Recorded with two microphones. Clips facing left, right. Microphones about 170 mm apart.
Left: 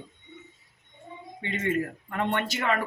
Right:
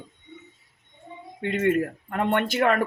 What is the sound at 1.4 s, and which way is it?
Speech, 55° right (ahead or behind).